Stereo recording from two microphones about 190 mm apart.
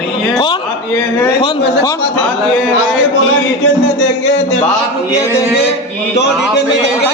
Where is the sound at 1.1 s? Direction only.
20° left (ahead or behind).